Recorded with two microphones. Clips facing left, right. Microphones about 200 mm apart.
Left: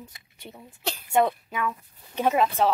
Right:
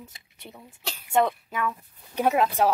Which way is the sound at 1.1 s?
5° left (ahead or behind).